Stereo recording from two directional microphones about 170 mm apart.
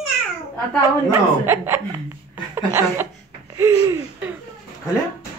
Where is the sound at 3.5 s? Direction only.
20° right (ahead or behind).